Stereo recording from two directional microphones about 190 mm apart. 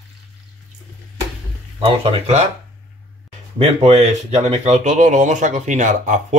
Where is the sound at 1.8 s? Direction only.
35° right (ahead or behind).